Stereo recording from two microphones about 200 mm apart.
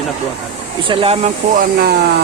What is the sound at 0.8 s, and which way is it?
Speech, 25° right (ahead or behind).